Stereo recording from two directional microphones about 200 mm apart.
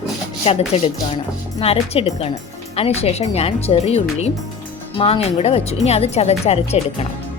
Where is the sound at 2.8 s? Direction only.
30° left (ahead or behind).